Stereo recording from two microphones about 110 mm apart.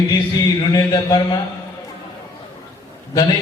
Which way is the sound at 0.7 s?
35° left (ahead or behind).